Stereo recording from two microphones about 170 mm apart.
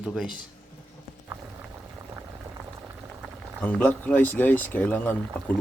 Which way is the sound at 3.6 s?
10° left (ahead or behind).